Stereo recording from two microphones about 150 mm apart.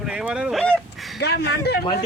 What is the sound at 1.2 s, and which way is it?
Speech, 90° left.